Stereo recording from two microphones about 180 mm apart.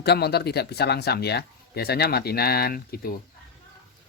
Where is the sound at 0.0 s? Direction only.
65° left (ahead or behind).